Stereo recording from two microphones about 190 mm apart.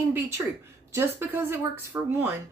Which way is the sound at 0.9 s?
10° right (ahead or behind).